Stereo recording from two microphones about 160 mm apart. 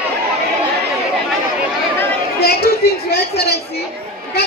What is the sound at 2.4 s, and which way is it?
Chatter, 80° left.